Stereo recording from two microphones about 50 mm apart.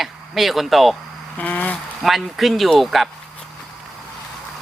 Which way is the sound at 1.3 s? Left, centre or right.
Left.